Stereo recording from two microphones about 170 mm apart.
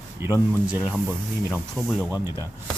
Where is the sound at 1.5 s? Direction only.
5° left (ahead or behind).